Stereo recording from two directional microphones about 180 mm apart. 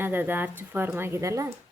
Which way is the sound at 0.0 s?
10° right (ahead or behind).